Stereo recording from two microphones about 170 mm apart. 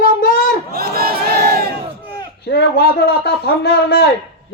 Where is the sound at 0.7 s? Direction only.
65° right (ahead or behind).